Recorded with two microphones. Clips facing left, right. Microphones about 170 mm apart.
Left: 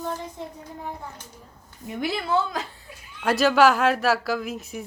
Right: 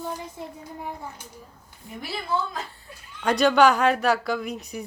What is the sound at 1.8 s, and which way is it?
Speech, 80° left.